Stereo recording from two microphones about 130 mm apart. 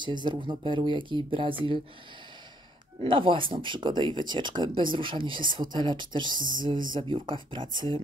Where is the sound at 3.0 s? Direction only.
40° right (ahead or behind).